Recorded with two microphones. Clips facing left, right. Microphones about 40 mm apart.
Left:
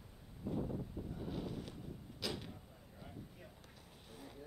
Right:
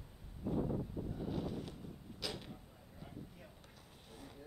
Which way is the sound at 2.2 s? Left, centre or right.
Centre.